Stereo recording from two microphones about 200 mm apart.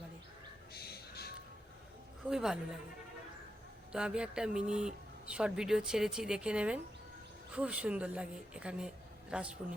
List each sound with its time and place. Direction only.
0.7 s a sound: 50° left (ahead or behind)
2.3 s speech: centre (ahead or behind)
3.9 s a woman's voice: 5° right (ahead or behind)